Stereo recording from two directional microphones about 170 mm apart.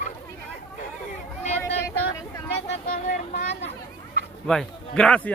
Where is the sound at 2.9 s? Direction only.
45° left (ahead or behind).